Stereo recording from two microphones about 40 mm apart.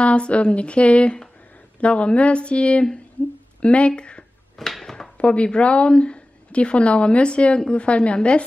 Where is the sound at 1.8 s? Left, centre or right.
Left.